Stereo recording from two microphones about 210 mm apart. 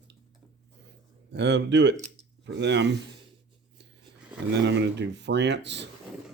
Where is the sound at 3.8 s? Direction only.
55° right (ahead or behind).